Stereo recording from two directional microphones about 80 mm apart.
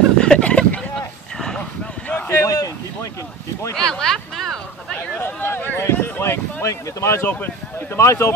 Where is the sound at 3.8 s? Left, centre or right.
Centre.